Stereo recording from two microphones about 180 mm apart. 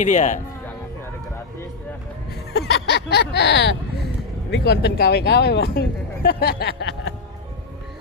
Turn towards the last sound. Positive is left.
turn(degrees=80)